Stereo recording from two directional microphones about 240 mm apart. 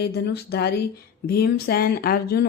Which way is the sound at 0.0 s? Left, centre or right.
Left.